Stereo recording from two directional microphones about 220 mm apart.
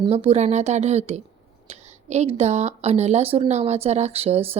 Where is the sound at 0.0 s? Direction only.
25° right (ahead or behind).